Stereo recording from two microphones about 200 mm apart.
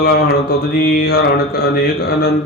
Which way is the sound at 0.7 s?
50° left (ahead or behind).